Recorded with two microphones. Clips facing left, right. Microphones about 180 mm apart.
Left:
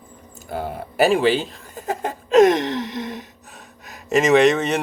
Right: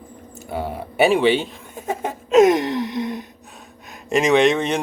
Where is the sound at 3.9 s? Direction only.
Centre (ahead or behind).